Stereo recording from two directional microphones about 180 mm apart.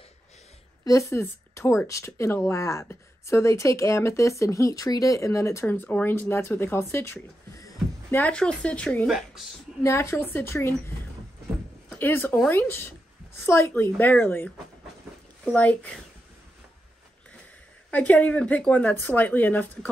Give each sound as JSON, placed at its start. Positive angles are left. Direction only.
{"t": 0.8, "sound": "speech", "side_deg": 15}
{"t": 9.8, "sound": "speech", "side_deg": 15}
{"t": 11.9, "sound": "speech", "side_deg": 10}
{"t": 15.5, "sound": "speech", "side_deg": 10}
{"t": 17.9, "sound": "speech", "side_deg": 10}